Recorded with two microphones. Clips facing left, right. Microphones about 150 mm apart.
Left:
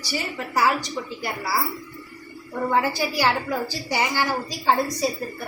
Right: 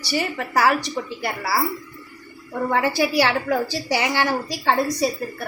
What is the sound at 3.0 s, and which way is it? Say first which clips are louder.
A woman's voice: right 3 dB; 75° right (ahead or behind).